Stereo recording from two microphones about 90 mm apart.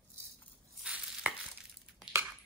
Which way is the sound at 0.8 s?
15° right (ahead or behind).